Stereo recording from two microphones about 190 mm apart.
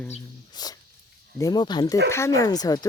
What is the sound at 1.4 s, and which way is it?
Speech, 20° left (ahead or behind).